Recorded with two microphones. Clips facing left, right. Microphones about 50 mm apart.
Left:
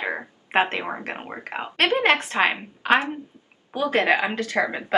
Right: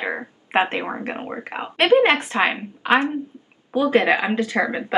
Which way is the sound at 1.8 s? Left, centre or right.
Centre.